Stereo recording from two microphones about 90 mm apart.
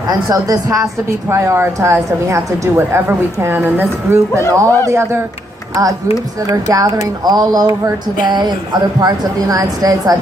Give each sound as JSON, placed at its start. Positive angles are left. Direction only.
{"t": 0.1, "sound": "a woman's voice", "side_deg": -40}
{"t": 4.4, "sound": "speech", "side_deg": 30}
{"t": 4.9, "sound": "a woman's voice", "side_deg": -30}
{"t": 6.5, "sound": "speech", "side_deg": -40}